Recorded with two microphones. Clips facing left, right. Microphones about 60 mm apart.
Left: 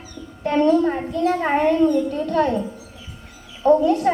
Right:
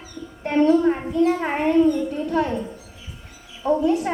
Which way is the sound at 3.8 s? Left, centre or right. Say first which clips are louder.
Left 2 dB; centre.